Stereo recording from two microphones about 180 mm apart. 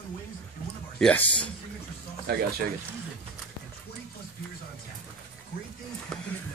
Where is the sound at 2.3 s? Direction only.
60° right (ahead or behind).